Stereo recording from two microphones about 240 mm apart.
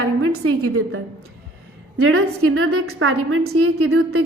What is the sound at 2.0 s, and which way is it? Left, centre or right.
A woman's voice, right.